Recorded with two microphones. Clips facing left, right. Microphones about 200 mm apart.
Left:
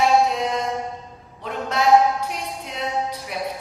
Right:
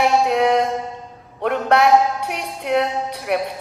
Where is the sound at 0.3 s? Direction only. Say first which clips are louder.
Right 7 dB; 65° right (ahead or behind).